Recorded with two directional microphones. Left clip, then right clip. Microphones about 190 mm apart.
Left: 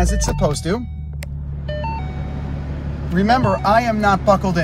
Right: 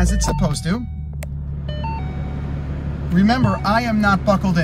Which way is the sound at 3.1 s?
10° right (ahead or behind).